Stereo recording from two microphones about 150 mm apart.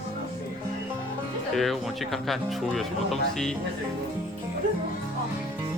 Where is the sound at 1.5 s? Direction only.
Centre (ahead or behind).